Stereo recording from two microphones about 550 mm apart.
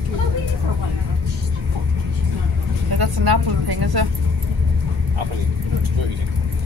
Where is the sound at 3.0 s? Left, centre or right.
Right.